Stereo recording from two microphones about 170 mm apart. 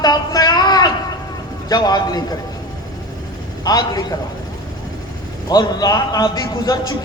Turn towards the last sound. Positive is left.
turn(degrees=25)  # may be behind; listen again after turning